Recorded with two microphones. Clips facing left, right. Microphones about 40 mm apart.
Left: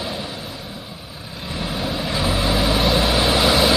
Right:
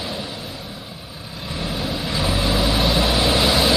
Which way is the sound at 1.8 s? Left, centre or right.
Centre.